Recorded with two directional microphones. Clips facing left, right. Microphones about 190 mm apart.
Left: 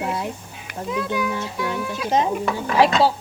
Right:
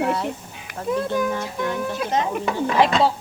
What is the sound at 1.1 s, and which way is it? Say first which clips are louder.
Speech: right 2 dB; 45° right (ahead or behind).